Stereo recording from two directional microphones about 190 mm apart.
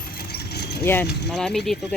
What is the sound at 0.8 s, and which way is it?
Speech, 10° left (ahead or behind).